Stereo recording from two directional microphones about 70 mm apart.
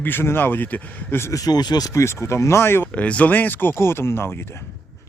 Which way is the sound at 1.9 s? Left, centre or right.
Left.